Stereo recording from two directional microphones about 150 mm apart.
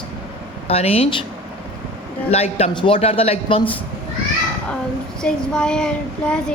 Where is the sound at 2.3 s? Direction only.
45° left (ahead or behind).